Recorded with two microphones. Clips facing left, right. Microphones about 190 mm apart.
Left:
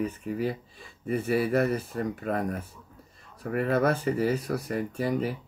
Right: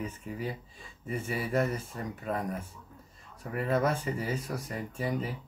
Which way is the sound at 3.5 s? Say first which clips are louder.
Left 4 dB; 60° left (ahead or behind).